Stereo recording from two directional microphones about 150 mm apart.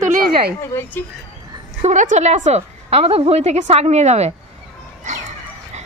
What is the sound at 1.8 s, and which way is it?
A woman's voice, 50° right (ahead or behind).